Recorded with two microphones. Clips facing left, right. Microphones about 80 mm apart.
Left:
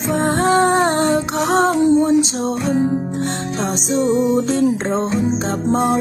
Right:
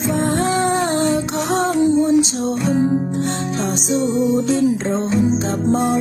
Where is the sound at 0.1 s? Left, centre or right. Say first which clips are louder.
Left 4 dB; left.